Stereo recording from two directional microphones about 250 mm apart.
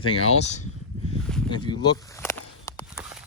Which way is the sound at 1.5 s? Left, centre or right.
Centre.